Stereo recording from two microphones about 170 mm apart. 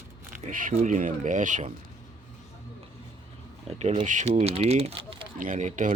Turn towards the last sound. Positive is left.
turn(degrees=-45)  # may be behind; listen again after turning